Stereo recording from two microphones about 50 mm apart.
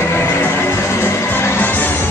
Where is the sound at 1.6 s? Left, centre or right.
Left.